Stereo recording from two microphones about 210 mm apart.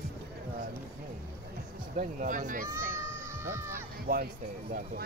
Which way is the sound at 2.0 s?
40° right (ahead or behind).